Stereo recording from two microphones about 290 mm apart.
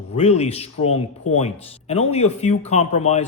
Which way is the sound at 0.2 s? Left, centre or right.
Left.